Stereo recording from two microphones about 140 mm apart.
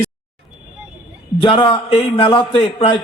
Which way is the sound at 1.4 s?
35° left (ahead or behind).